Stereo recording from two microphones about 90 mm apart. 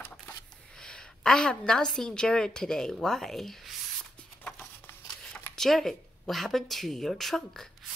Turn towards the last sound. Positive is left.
turn(degrees=5)  # may be behind; listen again after turning